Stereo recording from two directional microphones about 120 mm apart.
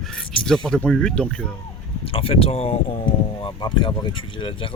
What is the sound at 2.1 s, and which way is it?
Speech, 50° left (ahead or behind).